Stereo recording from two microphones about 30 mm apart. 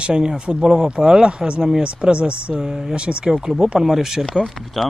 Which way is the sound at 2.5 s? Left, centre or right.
Centre.